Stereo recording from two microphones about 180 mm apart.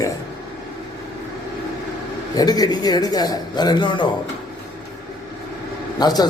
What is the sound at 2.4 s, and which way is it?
Speech, 20° left (ahead or behind).